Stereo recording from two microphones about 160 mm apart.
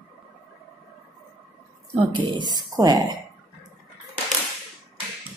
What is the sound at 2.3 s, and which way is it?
Speech, 25° right (ahead or behind).